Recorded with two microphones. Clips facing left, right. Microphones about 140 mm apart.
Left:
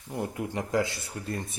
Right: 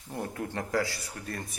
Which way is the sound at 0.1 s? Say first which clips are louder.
Left 2 dB; 15° left (ahead or behind).